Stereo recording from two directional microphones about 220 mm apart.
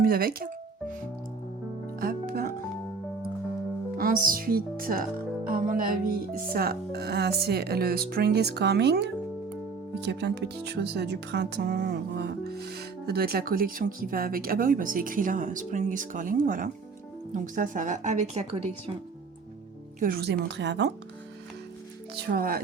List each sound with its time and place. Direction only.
0.0 s music: 40° right (ahead or behind)
2.0 s music: 40° right (ahead or behind)
3.9 s a woman's voice: 40° right (ahead or behind)
20.0 s speech: 45° right (ahead or behind)
22.1 s a woman's voice: 45° right (ahead or behind)